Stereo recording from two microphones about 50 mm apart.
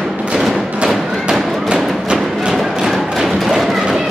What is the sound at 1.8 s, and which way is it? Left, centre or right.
Music, centre.